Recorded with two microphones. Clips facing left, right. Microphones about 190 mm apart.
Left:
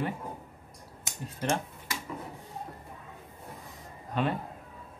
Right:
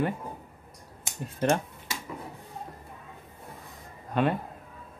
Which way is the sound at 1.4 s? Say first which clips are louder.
Right 5 dB; 55° right (ahead or behind).